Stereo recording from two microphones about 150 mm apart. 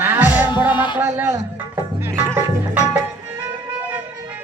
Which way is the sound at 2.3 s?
15° right (ahead or behind).